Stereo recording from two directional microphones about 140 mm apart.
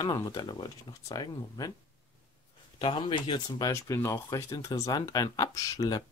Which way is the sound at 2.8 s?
40° left (ahead or behind).